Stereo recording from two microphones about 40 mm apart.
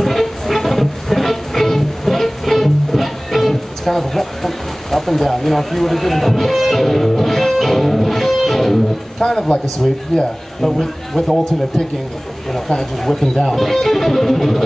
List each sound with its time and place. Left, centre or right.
0.0 s music: centre
9.2 s speech: centre
10.6 s speech: centre
13.5 s music: centre